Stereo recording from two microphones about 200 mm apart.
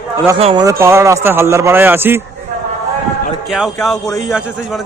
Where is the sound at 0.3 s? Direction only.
30° right (ahead or behind).